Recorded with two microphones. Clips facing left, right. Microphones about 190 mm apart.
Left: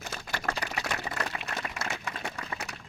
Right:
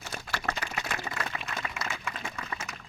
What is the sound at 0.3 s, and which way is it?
Typewriter, 50° left (ahead or behind).